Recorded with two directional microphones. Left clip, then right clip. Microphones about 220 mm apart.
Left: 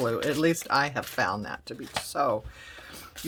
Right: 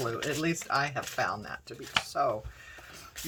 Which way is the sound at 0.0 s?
50° left (ahead or behind).